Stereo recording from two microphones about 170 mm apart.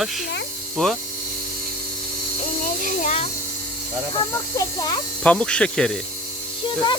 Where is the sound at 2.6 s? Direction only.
50° left (ahead or behind).